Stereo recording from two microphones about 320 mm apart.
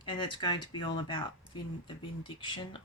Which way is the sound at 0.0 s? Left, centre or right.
Centre.